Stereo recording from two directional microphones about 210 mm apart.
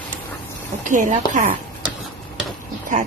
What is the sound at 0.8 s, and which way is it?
Speech, 35° right (ahead or behind).